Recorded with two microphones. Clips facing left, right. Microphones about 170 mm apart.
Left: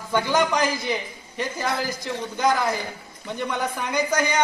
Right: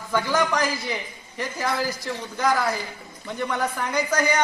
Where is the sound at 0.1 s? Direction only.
20° left (ahead or behind).